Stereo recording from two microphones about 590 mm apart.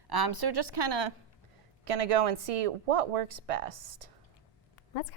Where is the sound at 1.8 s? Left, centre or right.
Right.